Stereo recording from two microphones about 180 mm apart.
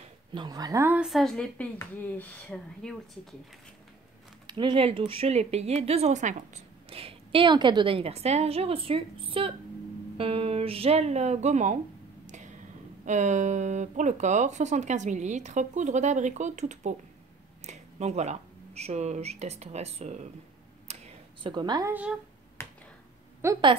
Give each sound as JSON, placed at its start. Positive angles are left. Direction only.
{"t": 0.3, "sound": "speech", "side_deg": -25}
{"t": 0.9, "sound": "a woman's voice", "side_deg": 0}
{"t": 4.5, "sound": "speech", "side_deg": -25}
{"t": 13.0, "sound": "speech", "side_deg": -40}
{"t": 20.8, "sound": "a sound", "side_deg": -30}
{"t": 22.6, "sound": "finger snapping", "side_deg": 15}
{"t": 23.4, "sound": "speech", "side_deg": -15}